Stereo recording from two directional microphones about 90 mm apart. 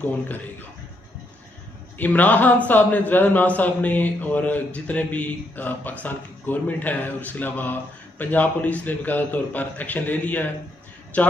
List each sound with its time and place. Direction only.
0.0 s a man's voice: 20° left (ahead or behind)
2.0 s a man's voice: 20° left (ahead or behind)